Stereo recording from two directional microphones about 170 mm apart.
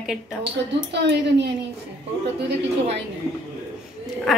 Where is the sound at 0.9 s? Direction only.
90° right.